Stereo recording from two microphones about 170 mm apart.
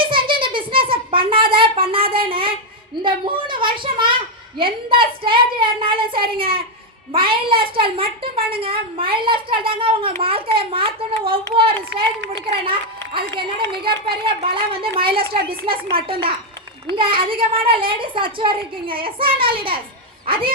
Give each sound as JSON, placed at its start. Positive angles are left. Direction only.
{"t": 0.0, "sound": "a sound", "side_deg": -30}
{"t": 4.6, "sound": "speech", "side_deg": -30}
{"t": 6.4, "sound": "a child's voice", "side_deg": -60}
{"t": 7.1, "sound": "speech", "side_deg": -30}